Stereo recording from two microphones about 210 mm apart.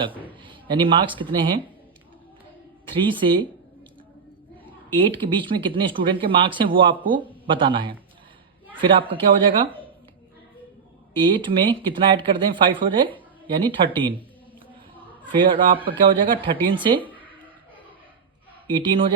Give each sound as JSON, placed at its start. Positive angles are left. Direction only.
{"t": 0.1, "sound": "a sound", "side_deg": 10}
{"t": 0.4, "sound": "speech", "side_deg": -25}
{"t": 2.8, "sound": "speech", "side_deg": -25}
{"t": 4.9, "sound": "speech", "side_deg": -25}
{"t": 11.2, "sound": "speech", "side_deg": -25}
{"t": 15.2, "sound": "speech", "side_deg": -25}
{"t": 18.7, "sound": "speech", "side_deg": -25}